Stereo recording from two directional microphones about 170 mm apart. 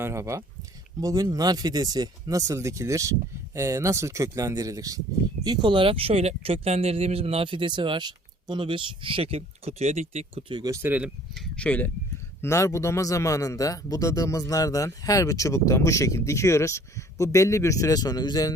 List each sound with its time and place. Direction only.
0.0 s speech: 15° right (ahead or behind); by 10.4 s 40° right (ahead or behind)
10.5 s speech: 25° right (ahead or behind)
10.8 s speech: 10° right (ahead or behind)
11.3 s speech: 5° left (ahead or behind)
12.4 s a man's voice: 15° left (ahead or behind)